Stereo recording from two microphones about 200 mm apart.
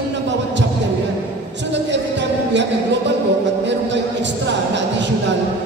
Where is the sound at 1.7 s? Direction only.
60° right (ahead or behind).